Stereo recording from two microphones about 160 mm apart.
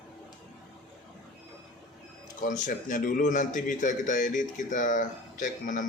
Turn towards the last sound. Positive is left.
turn(degrees=55)  # may be behind; listen again after turning